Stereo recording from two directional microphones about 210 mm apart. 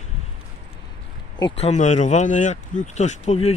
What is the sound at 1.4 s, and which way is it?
Speech, 25° left (ahead or behind).